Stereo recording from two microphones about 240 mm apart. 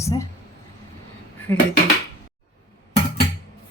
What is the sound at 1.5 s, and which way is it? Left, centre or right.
Speech, centre.